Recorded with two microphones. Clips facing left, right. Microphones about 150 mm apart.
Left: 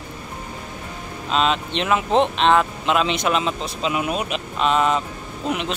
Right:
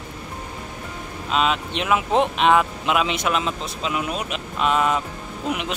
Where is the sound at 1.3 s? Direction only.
5° right (ahead or behind).